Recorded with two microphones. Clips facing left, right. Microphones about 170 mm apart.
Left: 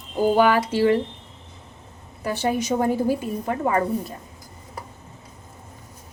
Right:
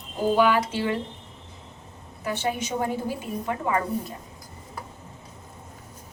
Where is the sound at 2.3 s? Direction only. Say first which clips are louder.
Left 5 dB; 40° left (ahead or behind).